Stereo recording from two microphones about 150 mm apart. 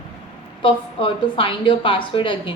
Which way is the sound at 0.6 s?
35° left (ahead or behind).